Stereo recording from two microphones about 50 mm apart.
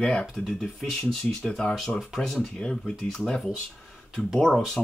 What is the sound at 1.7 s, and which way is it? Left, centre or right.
Speech, centre.